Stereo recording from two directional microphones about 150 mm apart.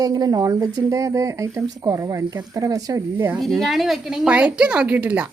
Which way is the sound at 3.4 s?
Centre (ahead or behind).